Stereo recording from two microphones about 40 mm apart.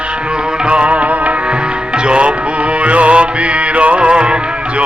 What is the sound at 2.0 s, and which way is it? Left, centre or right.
Music, right.